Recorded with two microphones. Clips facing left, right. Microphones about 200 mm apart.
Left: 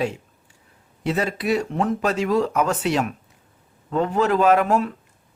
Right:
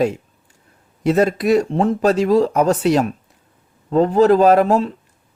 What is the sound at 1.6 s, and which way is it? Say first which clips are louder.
A man's voice: right 6 dB; 30° right (ahead or behind).